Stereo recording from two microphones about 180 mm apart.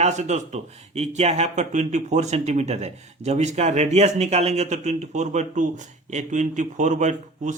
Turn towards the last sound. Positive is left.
turn(degrees=-40)  # may be behind; listen again after turning